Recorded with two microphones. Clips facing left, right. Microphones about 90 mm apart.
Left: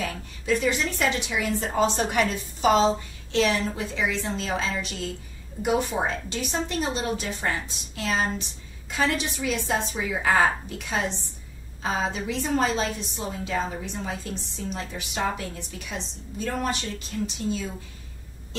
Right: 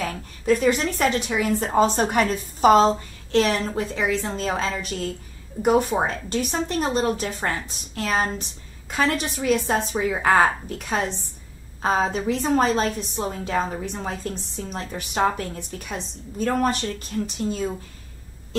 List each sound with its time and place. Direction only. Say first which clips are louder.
0.0 s a woman's voice: right 4 dB; 45° right (ahead or behind)